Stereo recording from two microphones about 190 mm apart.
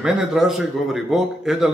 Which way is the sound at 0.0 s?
5° right (ahead or behind).